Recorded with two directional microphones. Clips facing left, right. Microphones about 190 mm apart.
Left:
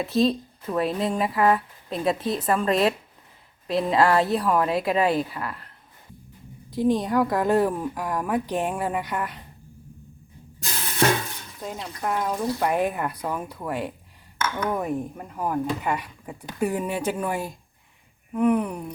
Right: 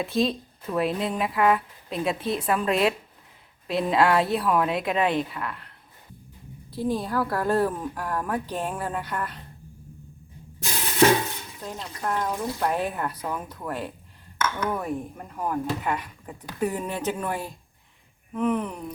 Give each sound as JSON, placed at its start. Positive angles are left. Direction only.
{"t": 0.0, "sound": "speech", "side_deg": 0}
{"t": 6.7, "sound": "a woman's voice", "side_deg": 15}
{"t": 11.6, "sound": "speech", "side_deg": 5}